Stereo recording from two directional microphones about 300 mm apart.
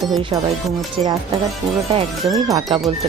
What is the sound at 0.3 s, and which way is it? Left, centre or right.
Speech, centre.